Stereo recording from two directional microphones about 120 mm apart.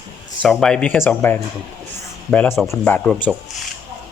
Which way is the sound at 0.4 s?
5° left (ahead or behind).